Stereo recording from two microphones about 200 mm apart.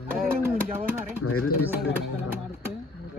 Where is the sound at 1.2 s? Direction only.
90° left.